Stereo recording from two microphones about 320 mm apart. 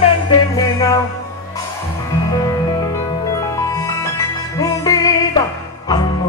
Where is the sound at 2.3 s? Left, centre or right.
Centre.